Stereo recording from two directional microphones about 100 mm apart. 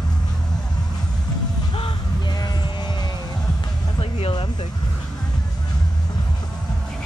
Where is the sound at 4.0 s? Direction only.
75° left (ahead or behind).